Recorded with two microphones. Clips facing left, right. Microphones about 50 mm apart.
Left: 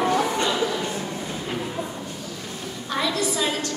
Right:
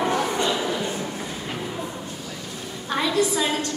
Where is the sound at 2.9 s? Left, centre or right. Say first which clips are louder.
Right 1 dB; centre.